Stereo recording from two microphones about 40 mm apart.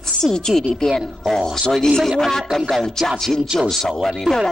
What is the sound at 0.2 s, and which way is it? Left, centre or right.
Speech, centre.